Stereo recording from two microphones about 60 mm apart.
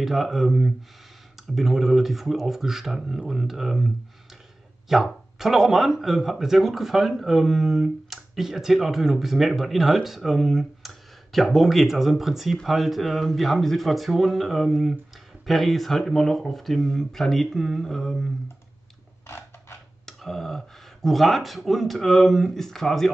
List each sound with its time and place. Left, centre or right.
0.0 s speech: centre
19.2 s a sound: left
20.1 s speech: centre